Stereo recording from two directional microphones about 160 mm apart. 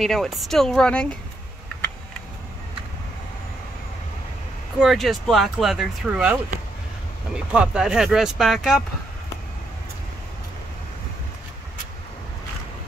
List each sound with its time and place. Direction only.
0.0 s speech: centre (ahead or behind)
4.7 s speech: centre (ahead or behind)